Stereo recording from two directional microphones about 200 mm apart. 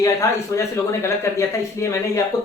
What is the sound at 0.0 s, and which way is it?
Speech, 15° left (ahead or behind).